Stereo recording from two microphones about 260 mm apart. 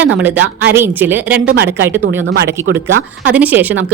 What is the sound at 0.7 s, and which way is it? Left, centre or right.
Speech, centre.